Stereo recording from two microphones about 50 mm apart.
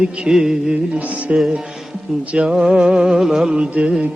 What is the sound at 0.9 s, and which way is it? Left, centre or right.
Music, right.